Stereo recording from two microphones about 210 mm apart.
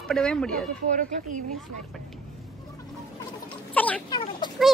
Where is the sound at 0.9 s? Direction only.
35° right (ahead or behind).